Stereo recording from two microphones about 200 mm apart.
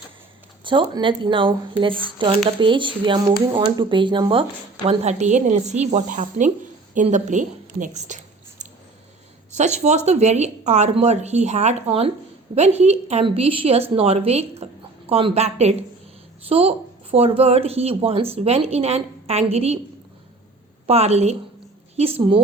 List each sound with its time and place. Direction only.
0.6 s a woman's voice: 25° right (ahead or behind)
8.0 s a sound: 35° right (ahead or behind)
9.5 s speech: 35° right (ahead or behind)
20.8 s speech: 30° right (ahead or behind)